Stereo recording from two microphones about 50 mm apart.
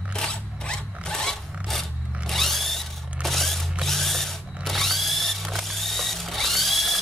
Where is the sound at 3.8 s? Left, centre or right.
Centre.